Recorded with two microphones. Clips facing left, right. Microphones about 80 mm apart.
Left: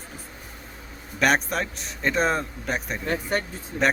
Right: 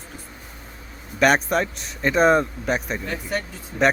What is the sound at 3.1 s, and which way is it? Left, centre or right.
Speech, left.